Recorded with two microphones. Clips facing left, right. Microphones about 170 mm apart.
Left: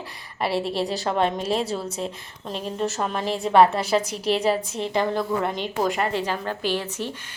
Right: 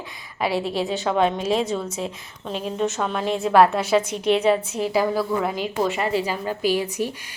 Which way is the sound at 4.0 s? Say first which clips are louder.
Right 3 dB; 35° left (ahead or behind).